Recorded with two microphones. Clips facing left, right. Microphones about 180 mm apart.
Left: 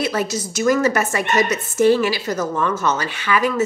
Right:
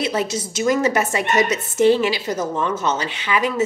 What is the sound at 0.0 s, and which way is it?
A woman's voice, 25° right (ahead or behind).